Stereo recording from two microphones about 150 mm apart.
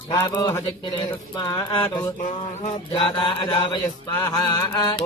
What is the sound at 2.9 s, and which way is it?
Chant, 35° left (ahead or behind).